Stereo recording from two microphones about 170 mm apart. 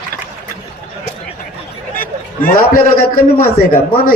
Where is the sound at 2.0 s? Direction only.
55° left (ahead or behind).